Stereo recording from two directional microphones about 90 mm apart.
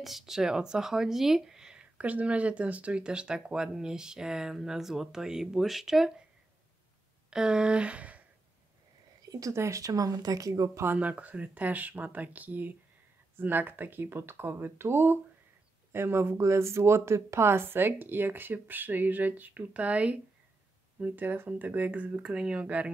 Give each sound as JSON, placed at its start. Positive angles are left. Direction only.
{"t": 0.0, "sound": "speech", "side_deg": -5}
{"t": 7.2, "sound": "speech", "side_deg": -10}
{"t": 9.2, "sound": "speech", "side_deg": -40}
{"t": 10.9, "sound": "speech", "side_deg": -15}